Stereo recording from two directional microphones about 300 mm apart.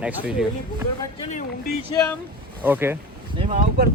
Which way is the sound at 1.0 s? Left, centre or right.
Left.